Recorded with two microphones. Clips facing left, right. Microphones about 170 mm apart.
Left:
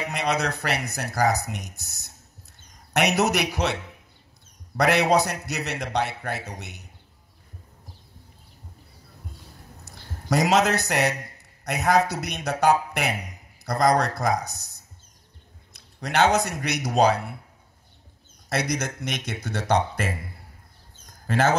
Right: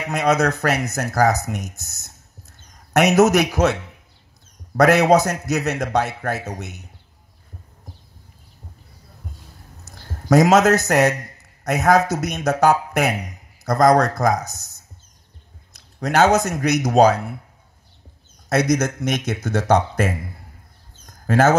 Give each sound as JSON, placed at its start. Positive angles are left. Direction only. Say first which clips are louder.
{"t": 0.1, "sound": "speech", "louder": "right 9 dB", "side_deg": -45}
{"t": 4.7, "sound": "speech", "louder": "right 6 dB", "side_deg": -45}
{"t": 9.9, "sound": "a sound", "louder": "right 2 dB", "side_deg": -45}
{"t": 10.3, "sound": "a man's voice", "louder": "right 7 dB", "side_deg": -45}
{"t": 18.5, "sound": "speech", "louder": "right 8 dB", "side_deg": -45}
{"t": 21.0, "sound": "a sound", "louder": "right 6 dB", "side_deg": -45}